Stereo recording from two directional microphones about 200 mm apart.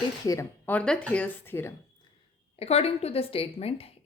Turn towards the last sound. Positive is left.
turn(degrees=30)  # may be behind; listen again after turning